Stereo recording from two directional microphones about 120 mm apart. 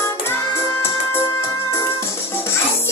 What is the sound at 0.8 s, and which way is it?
Music, 20° left (ahead or behind).